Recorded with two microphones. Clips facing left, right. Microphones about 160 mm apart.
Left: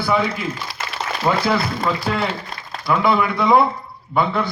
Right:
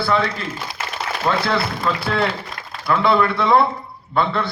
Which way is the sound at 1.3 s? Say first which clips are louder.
Left 1 dB; 5° left (ahead or behind).